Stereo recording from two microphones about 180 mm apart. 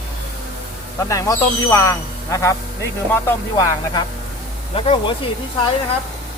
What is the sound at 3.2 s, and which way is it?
Music, 20° left (ahead or behind).